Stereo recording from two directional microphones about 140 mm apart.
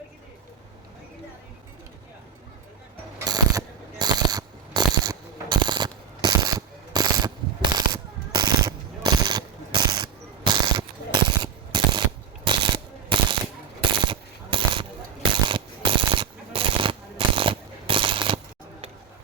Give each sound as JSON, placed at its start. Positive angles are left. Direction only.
{"t": 3.2, "sound": "mechanisms", "side_deg": -30}
{"t": 7.6, "sound": "machine gun", "side_deg": -30}
{"t": 12.5, "sound": "coin", "side_deg": -35}
{"t": 14.0, "sound": "a sound", "side_deg": -35}